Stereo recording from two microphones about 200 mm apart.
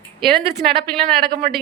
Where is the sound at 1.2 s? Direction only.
50° right (ahead or behind).